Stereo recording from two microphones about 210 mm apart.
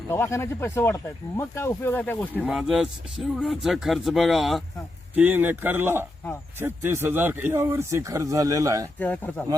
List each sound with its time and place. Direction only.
0.1 s speech: 10° left (ahead or behind)
2.4 s speech: 5° right (ahead or behind)
9.0 s speech: 5° left (ahead or behind)